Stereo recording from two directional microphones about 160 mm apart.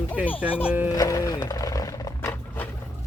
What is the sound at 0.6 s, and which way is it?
Speech, 10° right (ahead or behind).